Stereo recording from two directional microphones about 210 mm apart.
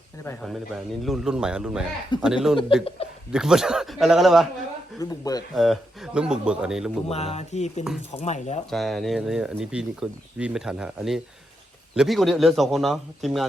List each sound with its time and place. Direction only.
0.3 s speech: centre (ahead or behind)
3.0 s chuckle: 25° left (ahead or behind)
3.3 s speech: centre (ahead or behind)
4.9 s speech: 15° left (ahead or behind)
5.5 s speech: centre (ahead or behind)
7.1 s speech: 30° left (ahead or behind)
8.7 s speech: centre (ahead or behind)